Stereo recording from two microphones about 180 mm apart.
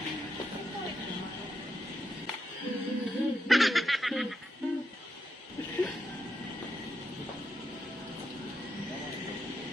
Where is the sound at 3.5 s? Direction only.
Centre (ahead or behind).